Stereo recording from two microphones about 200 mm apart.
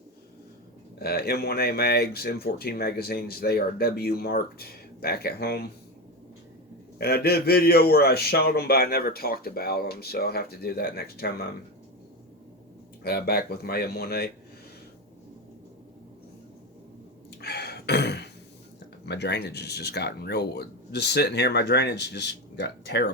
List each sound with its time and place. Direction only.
0.9 s speech: 50° left (ahead or behind)
7.0 s speech: 50° left (ahead or behind)
13.0 s speech: 50° left (ahead or behind)
17.4 s a sound: 55° left (ahead or behind)
19.0 s speech: 55° left (ahead or behind)